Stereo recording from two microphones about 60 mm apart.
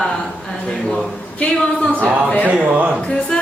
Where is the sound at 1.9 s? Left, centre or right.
Right.